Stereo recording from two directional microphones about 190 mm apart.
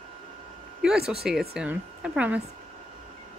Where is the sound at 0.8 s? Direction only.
5° right (ahead or behind).